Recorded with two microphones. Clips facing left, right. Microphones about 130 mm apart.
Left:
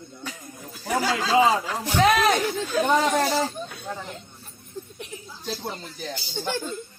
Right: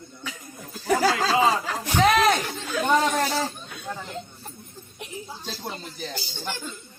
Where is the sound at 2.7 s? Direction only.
35° left (ahead or behind).